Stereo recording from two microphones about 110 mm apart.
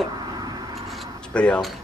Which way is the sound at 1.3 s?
10° left (ahead or behind).